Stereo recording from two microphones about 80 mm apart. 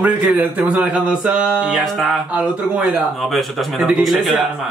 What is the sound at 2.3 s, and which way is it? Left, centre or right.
Speech, centre.